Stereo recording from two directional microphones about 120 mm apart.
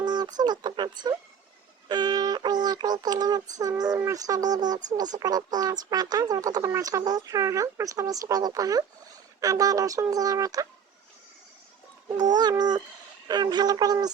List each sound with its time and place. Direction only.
0.0 s speech: 35° right (ahead or behind)
1.9 s synthetic singing: 35° right (ahead or behind)
5.1 s speech: 35° right (ahead or behind)
12.4 s speech: 35° right (ahead or behind)